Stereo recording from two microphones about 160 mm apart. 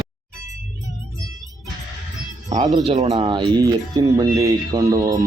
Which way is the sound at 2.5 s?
30° right (ahead or behind).